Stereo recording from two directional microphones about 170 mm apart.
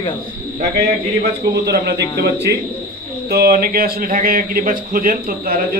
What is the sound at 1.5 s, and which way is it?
A man's voice, 75° right (ahead or behind).